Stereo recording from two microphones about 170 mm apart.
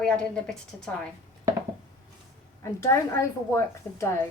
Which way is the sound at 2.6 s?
15° left (ahead or behind).